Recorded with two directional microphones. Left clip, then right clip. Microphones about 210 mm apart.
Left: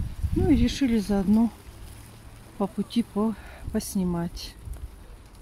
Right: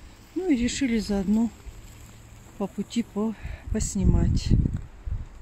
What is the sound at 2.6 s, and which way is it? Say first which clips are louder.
Speech: left 2 dB; 15° left (ahead or behind).